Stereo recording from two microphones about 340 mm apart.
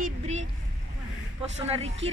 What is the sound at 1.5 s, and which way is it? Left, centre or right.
Speech, centre.